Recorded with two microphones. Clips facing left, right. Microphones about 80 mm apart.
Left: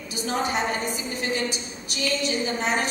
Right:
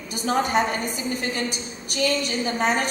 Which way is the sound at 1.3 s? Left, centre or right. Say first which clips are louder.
Left 1 dB; right.